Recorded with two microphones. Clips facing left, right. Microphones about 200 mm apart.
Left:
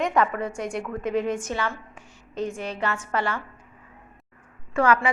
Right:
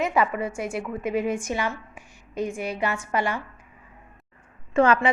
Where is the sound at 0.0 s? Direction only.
5° right (ahead or behind).